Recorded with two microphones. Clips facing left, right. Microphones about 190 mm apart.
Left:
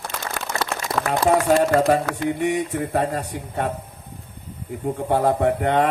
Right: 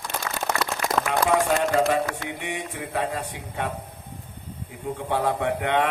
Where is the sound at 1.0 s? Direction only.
30° left (ahead or behind).